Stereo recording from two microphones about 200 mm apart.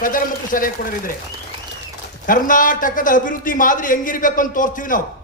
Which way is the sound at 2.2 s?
40° left (ahead or behind).